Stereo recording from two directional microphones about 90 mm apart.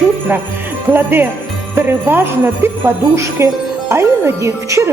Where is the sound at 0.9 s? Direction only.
25° right (ahead or behind).